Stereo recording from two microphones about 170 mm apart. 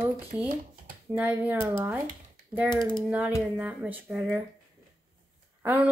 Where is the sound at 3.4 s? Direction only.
10° right (ahead or behind).